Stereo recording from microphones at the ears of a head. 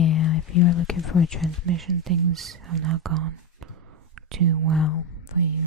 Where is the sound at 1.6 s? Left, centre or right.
Right.